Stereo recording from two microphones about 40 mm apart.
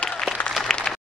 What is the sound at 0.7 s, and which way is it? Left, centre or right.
Applause, centre.